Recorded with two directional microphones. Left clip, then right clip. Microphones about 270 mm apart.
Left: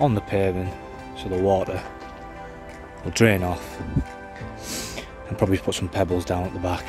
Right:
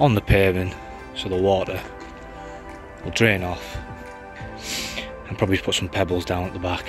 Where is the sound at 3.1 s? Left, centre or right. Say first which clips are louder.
Even; centre.